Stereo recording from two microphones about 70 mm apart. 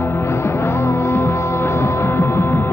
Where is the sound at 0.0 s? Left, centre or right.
Left.